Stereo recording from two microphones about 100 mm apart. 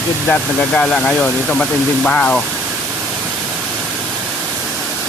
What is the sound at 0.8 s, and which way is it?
Speech, 10° left (ahead or behind).